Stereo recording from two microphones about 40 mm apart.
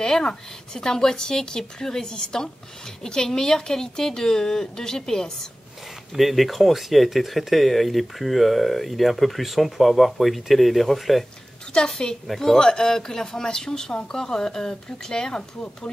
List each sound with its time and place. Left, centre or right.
0.0 s speech: centre
6.1 s speech: centre
11.7 s a woman's voice: left
12.3 s speech: centre